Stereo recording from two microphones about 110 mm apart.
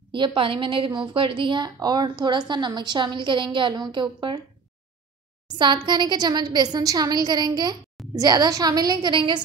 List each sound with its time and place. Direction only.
0.1 s a woman's voice: 50° right (ahead or behind)
5.6 s a woman's voice: 45° right (ahead or behind)